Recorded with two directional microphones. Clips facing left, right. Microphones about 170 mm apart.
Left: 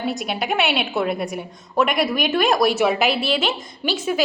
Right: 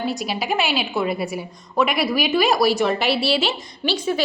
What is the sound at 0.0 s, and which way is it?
A woman's voice, centre (ahead or behind).